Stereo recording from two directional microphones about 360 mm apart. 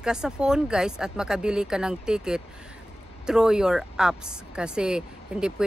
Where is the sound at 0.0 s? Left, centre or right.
Centre.